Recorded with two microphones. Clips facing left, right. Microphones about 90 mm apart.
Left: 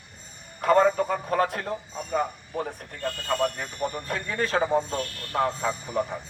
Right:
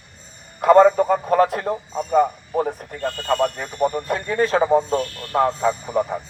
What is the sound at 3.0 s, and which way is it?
Speech, 60° right (ahead or behind).